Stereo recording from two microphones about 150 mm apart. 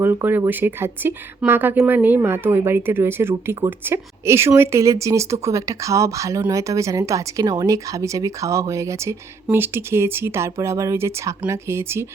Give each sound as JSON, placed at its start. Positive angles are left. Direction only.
{"t": 0.0, "sound": "speech", "side_deg": -15}